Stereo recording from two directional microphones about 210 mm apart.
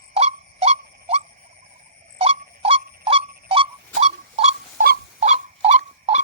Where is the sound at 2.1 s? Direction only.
25° right (ahead or behind).